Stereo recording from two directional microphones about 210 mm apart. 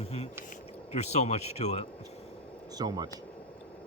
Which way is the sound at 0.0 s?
30° left (ahead or behind).